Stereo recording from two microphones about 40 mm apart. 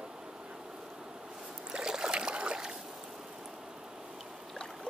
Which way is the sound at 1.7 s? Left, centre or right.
Centre.